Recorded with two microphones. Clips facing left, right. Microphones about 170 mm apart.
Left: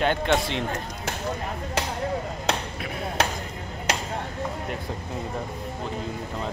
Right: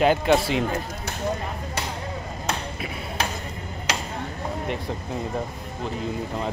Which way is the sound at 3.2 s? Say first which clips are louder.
Left 3 dB; 75° left (ahead or behind).